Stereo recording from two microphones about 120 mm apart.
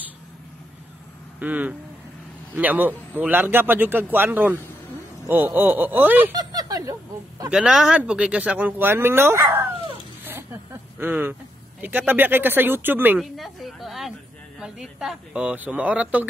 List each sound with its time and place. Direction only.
1.4 s speech: 15° right (ahead or behind)
6.3 s speech: 35° right (ahead or behind)
7.4 s speech: 5° right (ahead or behind)
10.2 s a sound: 20° right (ahead or behind)
12.1 s speech: 15° right (ahead or behind)
13.2 s speech: centre (ahead or behind)